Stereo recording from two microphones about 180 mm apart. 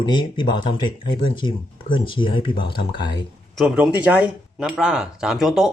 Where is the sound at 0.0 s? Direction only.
25° left (ahead or behind).